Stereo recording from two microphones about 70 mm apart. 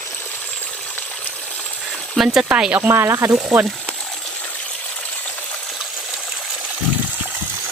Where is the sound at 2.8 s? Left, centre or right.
Right.